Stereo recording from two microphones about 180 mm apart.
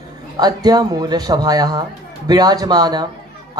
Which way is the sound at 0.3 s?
20° right (ahead or behind).